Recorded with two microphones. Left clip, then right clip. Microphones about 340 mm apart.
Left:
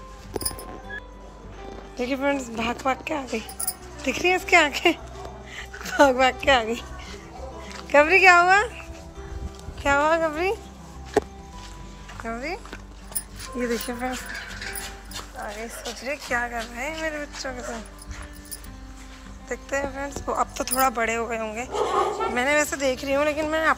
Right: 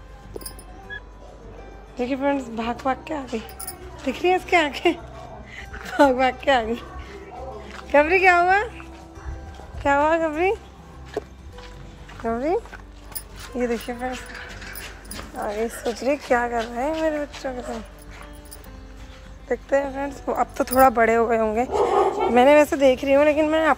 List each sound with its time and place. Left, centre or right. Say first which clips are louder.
2.0 s a woman's voice: right 2 dB; centre
5.5 s a sound: left 1 dB; centre
7.9 s a woman's voice: left 1 dB; centre
9.8 s speech: right 1 dB; centre
12.3 s speech: right 7 dB; centre
13.6 s speech: right 2 dB; centre
15.3 s speech: right 9 dB; right
19.5 s speech: right 6 dB; centre